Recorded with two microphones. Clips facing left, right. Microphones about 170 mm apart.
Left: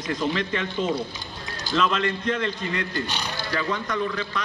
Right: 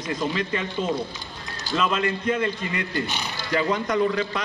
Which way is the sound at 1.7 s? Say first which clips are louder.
Even; 10° right (ahead or behind).